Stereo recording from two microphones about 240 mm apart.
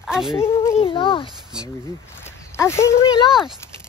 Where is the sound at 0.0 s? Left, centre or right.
Centre.